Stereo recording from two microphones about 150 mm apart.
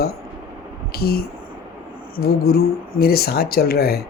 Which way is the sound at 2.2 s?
90° left.